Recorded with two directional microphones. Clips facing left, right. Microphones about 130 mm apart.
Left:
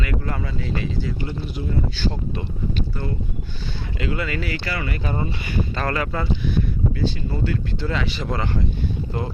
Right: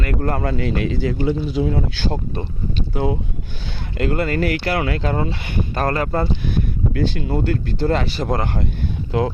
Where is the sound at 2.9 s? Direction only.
90° right.